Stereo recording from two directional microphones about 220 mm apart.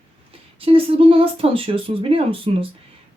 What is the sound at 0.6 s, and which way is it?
Speech, 25° right (ahead or behind).